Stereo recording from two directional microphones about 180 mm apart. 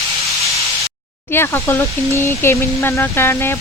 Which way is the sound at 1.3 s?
10° left (ahead or behind).